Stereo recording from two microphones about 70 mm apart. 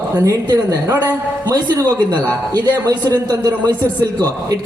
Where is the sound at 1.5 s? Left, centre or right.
Right.